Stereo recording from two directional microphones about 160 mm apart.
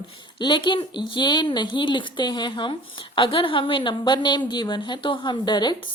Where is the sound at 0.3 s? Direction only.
30° left (ahead or behind).